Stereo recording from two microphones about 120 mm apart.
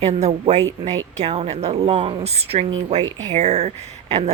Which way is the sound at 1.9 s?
40° right (ahead or behind).